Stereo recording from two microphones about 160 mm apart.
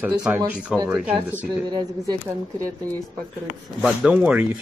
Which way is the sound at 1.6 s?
25° right (ahead or behind).